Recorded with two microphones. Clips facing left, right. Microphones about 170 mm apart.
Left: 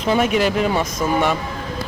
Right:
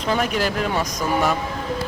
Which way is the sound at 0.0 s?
5° left (ahead or behind).